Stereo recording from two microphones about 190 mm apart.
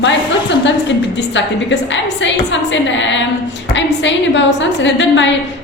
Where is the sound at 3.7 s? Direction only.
75° left (ahead or behind).